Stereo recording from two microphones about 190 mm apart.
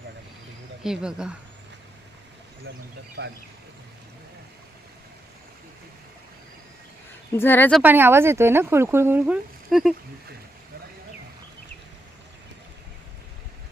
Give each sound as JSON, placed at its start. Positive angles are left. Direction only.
{"t": 0.9, "sound": "speech", "side_deg": -5}
{"t": 2.7, "sound": "speech", "side_deg": -55}
{"t": 7.3, "sound": "speech", "side_deg": 10}
{"t": 7.8, "sound": "speech", "side_deg": -10}